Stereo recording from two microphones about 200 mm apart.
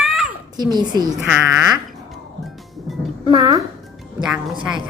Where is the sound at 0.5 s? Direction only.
20° right (ahead or behind).